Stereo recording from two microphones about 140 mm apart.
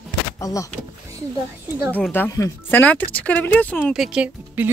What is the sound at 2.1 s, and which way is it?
Speech, 20° left (ahead or behind).